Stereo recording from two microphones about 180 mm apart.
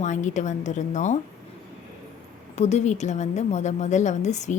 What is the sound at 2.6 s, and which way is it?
A woman's voice, 40° left (ahead or behind).